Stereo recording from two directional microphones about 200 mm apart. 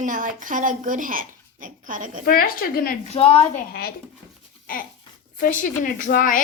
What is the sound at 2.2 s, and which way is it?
Speech, 45° left (ahead or behind).